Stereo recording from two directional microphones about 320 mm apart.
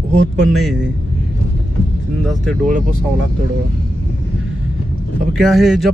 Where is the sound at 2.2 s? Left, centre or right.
Centre.